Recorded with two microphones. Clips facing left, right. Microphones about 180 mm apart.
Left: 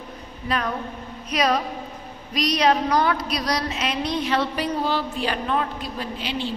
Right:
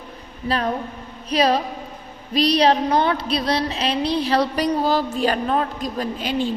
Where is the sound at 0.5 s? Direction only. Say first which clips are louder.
Right 3 dB; 30° right (ahead or behind).